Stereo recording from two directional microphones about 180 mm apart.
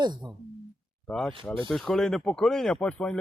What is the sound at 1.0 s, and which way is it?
Speech, 5° left (ahead or behind).